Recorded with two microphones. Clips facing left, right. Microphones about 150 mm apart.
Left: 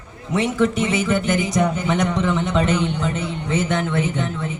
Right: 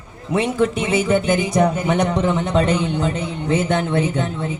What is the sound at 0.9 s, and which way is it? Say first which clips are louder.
A man's voice: right 3 dB; 30° right (ahead or behind).